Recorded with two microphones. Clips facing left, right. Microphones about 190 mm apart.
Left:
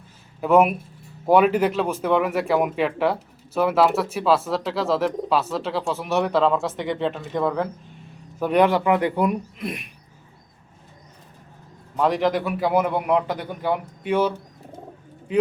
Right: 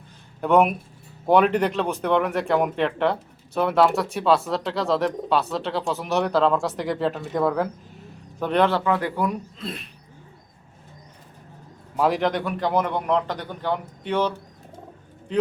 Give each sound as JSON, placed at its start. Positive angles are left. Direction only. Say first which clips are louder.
{"t": 0.4, "sound": "speech", "louder": "left 1 dB", "side_deg": 5}
{"t": 8.4, "sound": "a man's voice", "louder": "left 2 dB", "side_deg": 10}
{"t": 11.9, "sound": "a man's voice", "louder": "left 1 dB", "side_deg": 0}